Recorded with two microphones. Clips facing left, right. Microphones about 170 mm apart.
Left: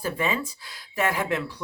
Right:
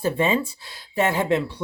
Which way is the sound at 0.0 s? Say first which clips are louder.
Right 6 dB; 25° right (ahead or behind).